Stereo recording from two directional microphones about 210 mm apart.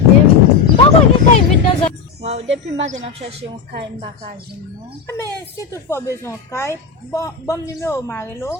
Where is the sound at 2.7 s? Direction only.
60° right (ahead or behind).